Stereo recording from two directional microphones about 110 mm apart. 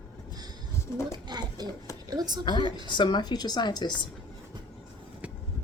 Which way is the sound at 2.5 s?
45° left (ahead or behind).